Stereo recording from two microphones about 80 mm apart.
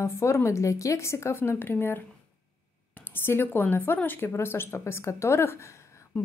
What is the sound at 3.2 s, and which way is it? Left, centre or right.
Speech, left.